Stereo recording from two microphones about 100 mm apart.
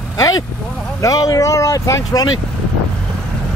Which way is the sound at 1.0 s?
40° left (ahead or behind).